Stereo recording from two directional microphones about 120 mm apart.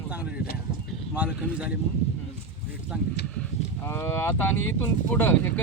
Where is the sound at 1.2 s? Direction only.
10° right (ahead or behind).